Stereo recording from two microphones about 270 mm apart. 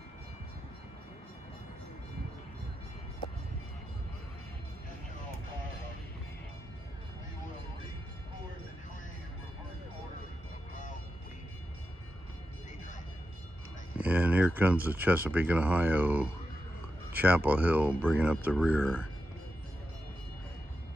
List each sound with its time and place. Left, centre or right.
13.9 s speech: centre